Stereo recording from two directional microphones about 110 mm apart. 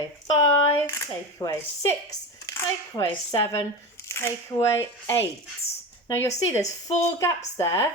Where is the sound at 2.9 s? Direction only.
30° left (ahead or behind).